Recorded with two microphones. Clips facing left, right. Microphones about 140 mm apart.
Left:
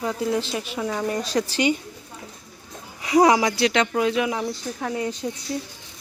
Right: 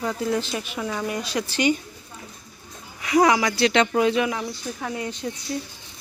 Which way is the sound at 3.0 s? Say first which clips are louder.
Left 2 dB; 30° left (ahead or behind).